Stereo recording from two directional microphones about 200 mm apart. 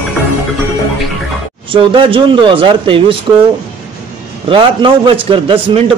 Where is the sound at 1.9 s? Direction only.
25° right (ahead or behind).